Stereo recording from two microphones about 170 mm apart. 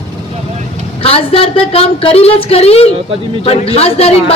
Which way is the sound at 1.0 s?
35° left (ahead or behind).